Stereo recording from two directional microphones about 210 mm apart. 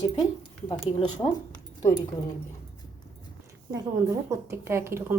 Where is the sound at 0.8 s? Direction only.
25° left (ahead or behind).